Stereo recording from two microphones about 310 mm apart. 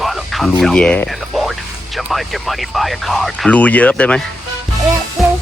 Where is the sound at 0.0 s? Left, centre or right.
Centre.